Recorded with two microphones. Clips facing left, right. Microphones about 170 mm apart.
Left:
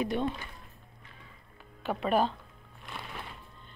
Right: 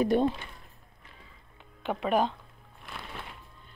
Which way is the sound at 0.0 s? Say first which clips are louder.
Right 6 dB; 40° right (ahead or behind).